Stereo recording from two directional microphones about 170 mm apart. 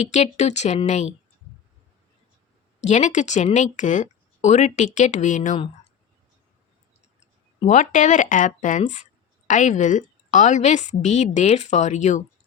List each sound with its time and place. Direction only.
0.1 s speech: 45° left (ahead or behind)
2.8 s speech: 45° left (ahead or behind)
7.7 s speech: 45° left (ahead or behind)